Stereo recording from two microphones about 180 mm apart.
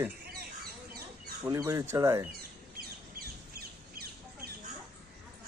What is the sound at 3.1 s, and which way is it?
Bird, 60° right (ahead or behind).